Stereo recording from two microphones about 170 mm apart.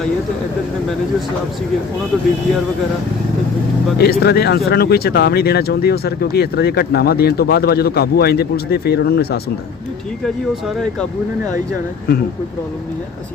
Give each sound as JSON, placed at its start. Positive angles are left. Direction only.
{"t": 3.9, "sound": "speech", "side_deg": 70}